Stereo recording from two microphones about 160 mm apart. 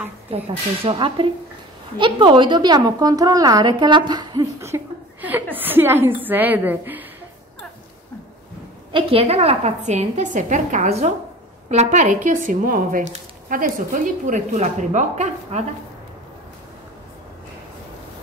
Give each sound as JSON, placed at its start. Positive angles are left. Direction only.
{"t": 0.8, "sound": "a woman's voice", "side_deg": -35}
{"t": 8.9, "sound": "a woman's voice", "side_deg": -40}